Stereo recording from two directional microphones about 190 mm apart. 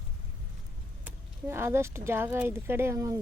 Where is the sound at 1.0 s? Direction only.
10° right (ahead or behind).